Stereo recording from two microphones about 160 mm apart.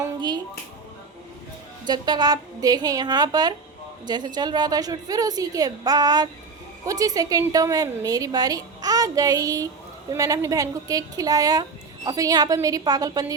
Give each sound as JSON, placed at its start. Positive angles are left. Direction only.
{"t": 1.9, "sound": "a woman's voice", "side_deg": -25}